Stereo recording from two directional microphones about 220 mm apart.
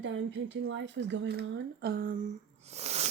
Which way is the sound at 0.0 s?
55° right (ahead or behind).